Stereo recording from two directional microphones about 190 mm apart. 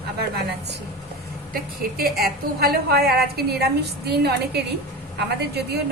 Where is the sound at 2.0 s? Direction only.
55° right (ahead or behind).